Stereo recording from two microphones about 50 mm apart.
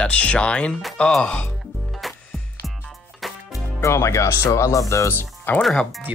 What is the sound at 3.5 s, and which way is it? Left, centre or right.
Speech, left.